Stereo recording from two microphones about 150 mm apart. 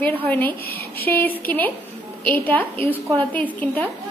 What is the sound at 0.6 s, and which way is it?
Speech, 90° left.